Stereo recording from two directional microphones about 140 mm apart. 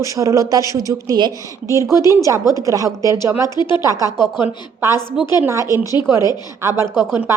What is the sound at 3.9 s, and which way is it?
Speech, 25° right (ahead or behind).